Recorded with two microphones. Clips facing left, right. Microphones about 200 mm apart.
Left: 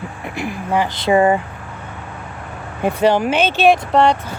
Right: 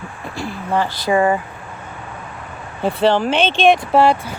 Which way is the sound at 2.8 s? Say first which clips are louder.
Left 1 dB; 10° left (ahead or behind).